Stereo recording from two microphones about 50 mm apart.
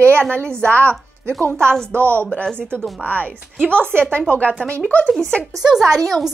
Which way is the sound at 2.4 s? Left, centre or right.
Centre.